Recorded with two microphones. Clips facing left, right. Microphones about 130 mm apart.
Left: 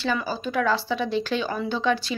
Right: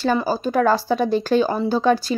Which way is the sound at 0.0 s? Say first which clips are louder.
Right 6 dB; 40° right (ahead or behind).